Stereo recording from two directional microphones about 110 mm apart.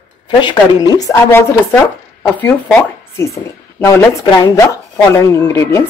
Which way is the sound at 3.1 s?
25° left (ahead or behind).